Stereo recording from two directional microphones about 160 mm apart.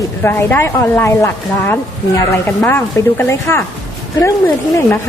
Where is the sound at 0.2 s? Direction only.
15° left (ahead or behind).